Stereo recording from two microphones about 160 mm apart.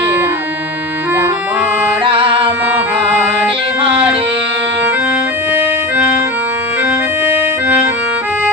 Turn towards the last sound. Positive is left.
turn(degrees=-15)  # may be behind; listen again after turning